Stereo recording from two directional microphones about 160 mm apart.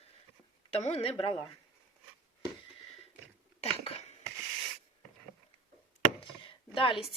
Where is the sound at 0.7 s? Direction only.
35° left (ahead or behind).